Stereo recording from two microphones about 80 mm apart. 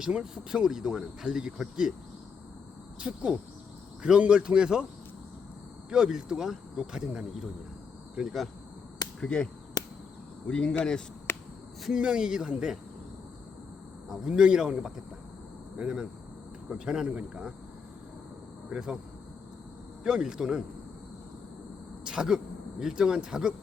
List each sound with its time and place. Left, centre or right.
0.0 s speech: centre
3.0 s speech: centre
5.9 s speech: centre
9.2 s speech: centre
11.3 s a sound: left
11.8 s speech: centre
14.1 s speech: centre
18.7 s speech: centre
20.1 s speech: centre
22.0 s speech: centre